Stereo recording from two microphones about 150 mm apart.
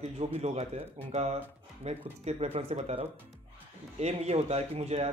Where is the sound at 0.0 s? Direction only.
45° right (ahead or behind).